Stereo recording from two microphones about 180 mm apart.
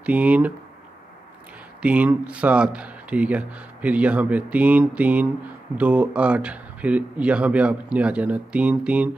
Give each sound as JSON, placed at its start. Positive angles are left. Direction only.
{"t": 0.0, "sound": "speech", "side_deg": -10}
{"t": 1.8, "sound": "speech", "side_deg": -10}